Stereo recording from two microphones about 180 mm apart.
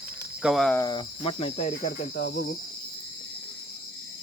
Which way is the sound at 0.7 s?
20° left (ahead or behind).